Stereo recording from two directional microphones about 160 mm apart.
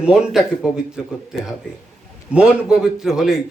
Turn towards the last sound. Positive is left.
turn(degrees=-5)  # may be behind; listen again after turning